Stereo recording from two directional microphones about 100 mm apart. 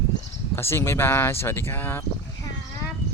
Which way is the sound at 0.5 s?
25° left (ahead or behind).